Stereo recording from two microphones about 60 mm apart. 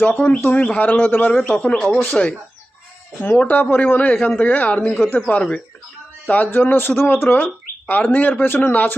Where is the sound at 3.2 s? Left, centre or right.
Left.